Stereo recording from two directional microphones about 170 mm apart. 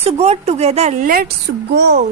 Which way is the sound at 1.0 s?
55° right (ahead or behind).